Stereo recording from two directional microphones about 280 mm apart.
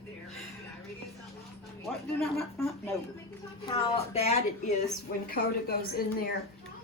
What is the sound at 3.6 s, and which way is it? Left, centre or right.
A woman's voice, left.